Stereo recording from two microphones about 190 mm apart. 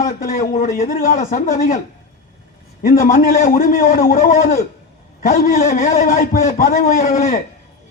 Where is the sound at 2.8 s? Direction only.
45° left (ahead or behind).